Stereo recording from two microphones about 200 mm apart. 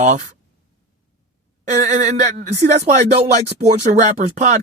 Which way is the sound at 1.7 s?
35° right (ahead or behind).